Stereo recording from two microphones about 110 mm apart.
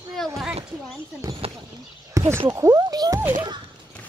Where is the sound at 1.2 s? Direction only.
30° right (ahead or behind).